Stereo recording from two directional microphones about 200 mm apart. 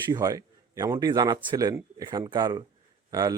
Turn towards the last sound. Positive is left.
turn(degrees=-20)  # may be behind; listen again after turning